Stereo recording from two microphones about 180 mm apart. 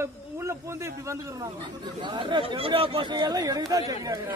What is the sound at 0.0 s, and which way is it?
A man's voice, 15° right (ahead or behind).